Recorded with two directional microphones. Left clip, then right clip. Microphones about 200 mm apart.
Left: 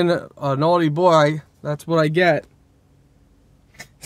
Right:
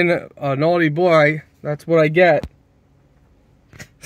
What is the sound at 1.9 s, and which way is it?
Speech, 15° right (ahead or behind).